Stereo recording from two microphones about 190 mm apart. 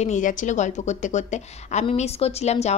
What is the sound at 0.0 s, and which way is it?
A woman's voice, 40° left (ahead or behind).